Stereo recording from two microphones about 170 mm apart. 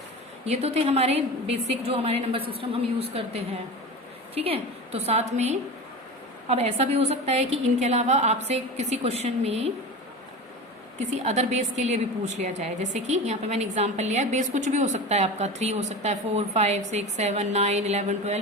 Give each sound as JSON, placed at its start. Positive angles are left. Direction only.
{"t": 0.4, "sound": "a woman's voice", "side_deg": -40}
{"t": 11.0, "sound": "a woman's voice", "side_deg": -40}